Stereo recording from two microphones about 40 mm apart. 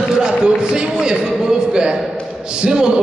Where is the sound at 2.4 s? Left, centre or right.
Right.